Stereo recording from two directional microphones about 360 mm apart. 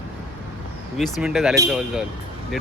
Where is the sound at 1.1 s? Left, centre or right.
Centre.